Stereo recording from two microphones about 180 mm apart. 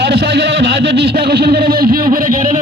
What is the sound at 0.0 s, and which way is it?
Speech, 65° right (ahead or behind).